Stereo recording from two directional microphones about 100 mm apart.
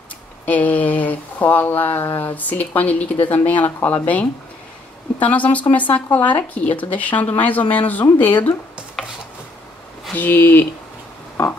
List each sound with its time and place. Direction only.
0.5 s speech: 15° left (ahead or behind)
9.0 s chopping: centre (ahead or behind)
10.1 s speech: 20° left (ahead or behind)